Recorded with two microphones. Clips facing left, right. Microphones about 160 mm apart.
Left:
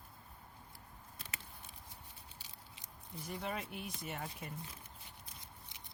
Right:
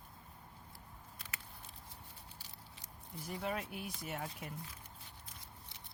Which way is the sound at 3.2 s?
5° right (ahead or behind).